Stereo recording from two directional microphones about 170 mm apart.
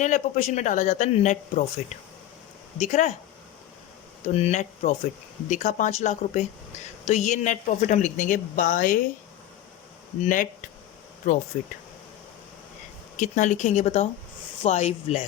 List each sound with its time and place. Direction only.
0.0 s speech: 45° left (ahead or behind)
4.3 s speech: 40° left (ahead or behind)
10.2 s speech: 50° left (ahead or behind)
13.1 s speech: 45° left (ahead or behind)